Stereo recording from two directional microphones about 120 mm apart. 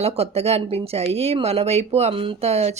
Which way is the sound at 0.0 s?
60° right (ahead or behind).